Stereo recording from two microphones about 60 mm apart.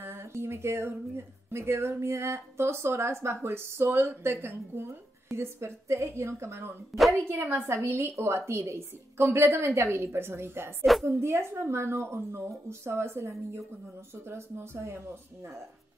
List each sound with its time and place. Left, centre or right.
0.0 s a woman's voice: right
6.9 s a woman's voice: centre
7.2 s a woman's voice: right